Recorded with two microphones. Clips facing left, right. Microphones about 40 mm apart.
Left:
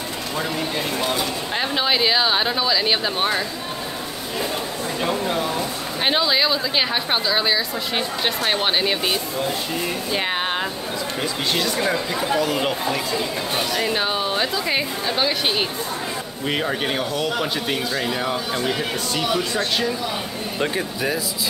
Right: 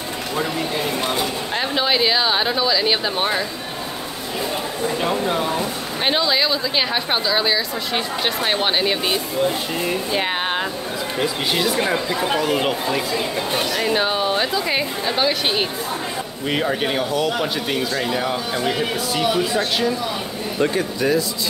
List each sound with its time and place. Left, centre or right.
1.6 s speech: centre
4.8 s speech: centre
6.0 s speech: centre
11.8 s speech: right
12.4 s speech: centre
13.7 s speech: centre
20.6 s speech: centre